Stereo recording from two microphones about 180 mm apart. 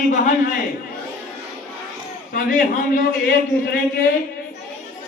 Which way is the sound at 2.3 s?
50° left (ahead or behind).